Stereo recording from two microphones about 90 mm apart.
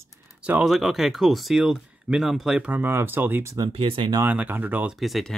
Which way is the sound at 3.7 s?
90° right.